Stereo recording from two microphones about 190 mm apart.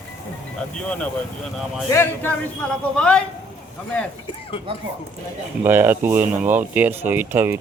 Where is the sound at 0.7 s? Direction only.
5° left (ahead or behind).